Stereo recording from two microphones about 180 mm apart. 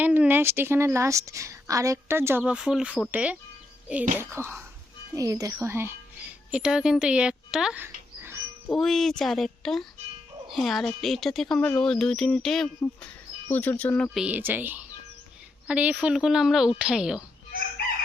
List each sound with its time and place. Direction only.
0.0 s a woman's voice: 10° right (ahead or behind)
8.7 s speech: centre (ahead or behind)